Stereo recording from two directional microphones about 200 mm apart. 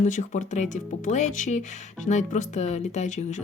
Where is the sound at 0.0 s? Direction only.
40° left (ahead or behind).